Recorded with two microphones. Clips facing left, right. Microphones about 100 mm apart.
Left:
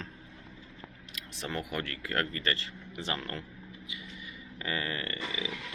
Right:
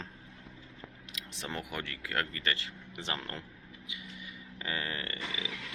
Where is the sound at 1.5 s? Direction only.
10° right (ahead or behind).